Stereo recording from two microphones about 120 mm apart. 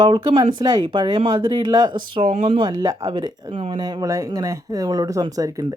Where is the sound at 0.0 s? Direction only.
40° right (ahead or behind).